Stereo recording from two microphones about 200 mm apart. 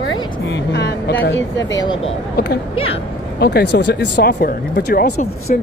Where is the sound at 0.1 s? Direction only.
60° left (ahead or behind).